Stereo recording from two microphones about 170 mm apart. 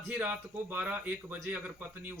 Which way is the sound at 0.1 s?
10° right (ahead or behind).